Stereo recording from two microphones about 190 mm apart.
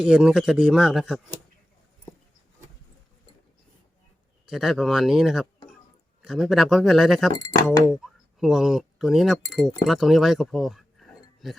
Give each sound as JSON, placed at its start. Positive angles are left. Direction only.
{"t": 0.0, "sound": "a man's voice", "side_deg": -5}
{"t": 4.4, "sound": "a man's voice", "side_deg": 0}
{"t": 7.3, "sound": "speech", "side_deg": 15}
{"t": 7.9, "sound": "speech", "side_deg": 0}